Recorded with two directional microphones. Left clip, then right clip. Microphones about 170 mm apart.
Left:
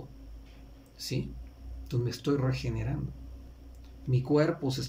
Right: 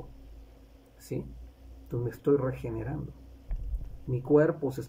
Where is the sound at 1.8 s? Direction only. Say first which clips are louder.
Right 4 dB; 5° right (ahead or behind).